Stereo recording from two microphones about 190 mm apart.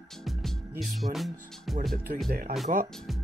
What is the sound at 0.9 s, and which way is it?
Speech, centre (ahead or behind).